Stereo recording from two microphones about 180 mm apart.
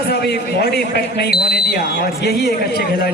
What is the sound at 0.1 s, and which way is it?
Speech, 65° left (ahead or behind).